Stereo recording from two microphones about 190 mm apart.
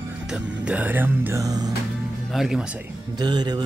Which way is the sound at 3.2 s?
20° right (ahead or behind).